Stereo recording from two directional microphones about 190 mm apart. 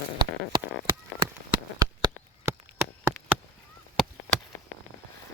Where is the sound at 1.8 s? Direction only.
20° right (ahead or behind).